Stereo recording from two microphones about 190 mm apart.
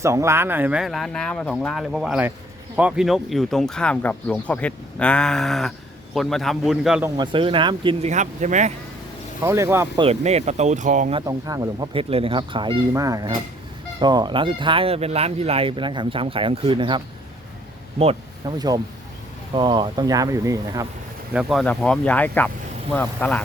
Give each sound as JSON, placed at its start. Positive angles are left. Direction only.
{"t": 0.0, "sound": "speech", "side_deg": -15}
{"t": 7.2, "sound": "speech", "side_deg": -25}
{"t": 8.1, "sound": "speech", "side_deg": -40}
{"t": 9.4, "sound": "speech", "side_deg": -15}
{"t": 10.0, "sound": "speech", "side_deg": -35}
{"t": 11.1, "sound": "speech", "side_deg": -20}
{"t": 18.0, "sound": "speech", "side_deg": -25}
{"t": 21.3, "sound": "speech", "side_deg": 0}